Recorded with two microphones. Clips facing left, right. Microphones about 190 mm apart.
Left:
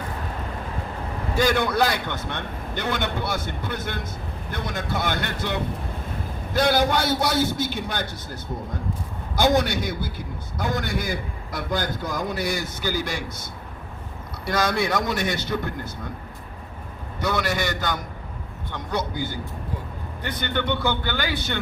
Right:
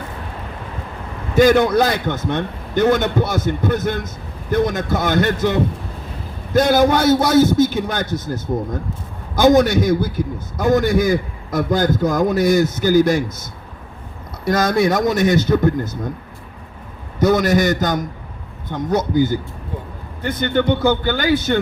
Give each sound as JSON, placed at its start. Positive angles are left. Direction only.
{"t": 1.5, "sound": "a man's voice", "side_deg": -45}
{"t": 14.4, "sound": "a man's voice", "side_deg": -45}
{"t": 17.2, "sound": "a man's voice", "side_deg": -40}